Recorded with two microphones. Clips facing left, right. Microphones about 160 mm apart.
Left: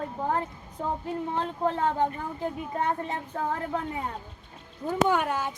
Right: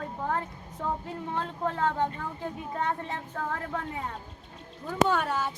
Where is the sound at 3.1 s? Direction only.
20° left (ahead or behind).